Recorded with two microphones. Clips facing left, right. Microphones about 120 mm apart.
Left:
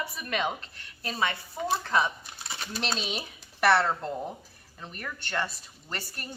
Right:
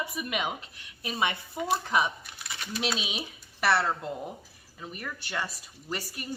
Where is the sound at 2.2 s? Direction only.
30° left (ahead or behind).